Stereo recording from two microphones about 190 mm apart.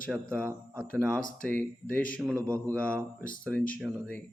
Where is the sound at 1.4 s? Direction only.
5° left (ahead or behind).